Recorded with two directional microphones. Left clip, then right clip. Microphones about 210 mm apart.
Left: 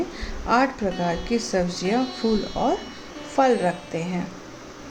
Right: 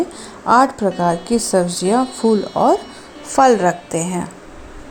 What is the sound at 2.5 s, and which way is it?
A woman's voice, 30° right (ahead or behind).